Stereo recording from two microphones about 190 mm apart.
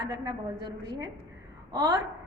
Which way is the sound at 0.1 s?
20° right (ahead or behind).